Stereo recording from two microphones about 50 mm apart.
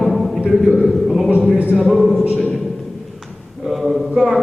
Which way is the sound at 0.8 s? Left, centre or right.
Centre.